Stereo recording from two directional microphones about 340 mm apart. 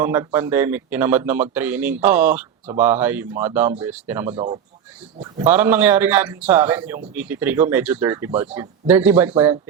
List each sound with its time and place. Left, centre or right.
0.0 s speech: centre
4.4 s speech: centre